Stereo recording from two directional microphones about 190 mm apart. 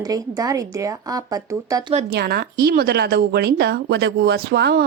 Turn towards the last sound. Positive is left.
turn(degrees=-55)  # may be behind; listen again after turning